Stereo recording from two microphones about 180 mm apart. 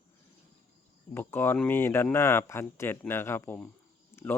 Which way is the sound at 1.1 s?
10° left (ahead or behind).